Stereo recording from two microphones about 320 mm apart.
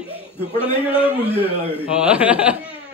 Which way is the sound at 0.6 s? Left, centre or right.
Centre.